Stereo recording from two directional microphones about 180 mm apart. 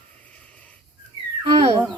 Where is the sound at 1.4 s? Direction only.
30° right (ahead or behind).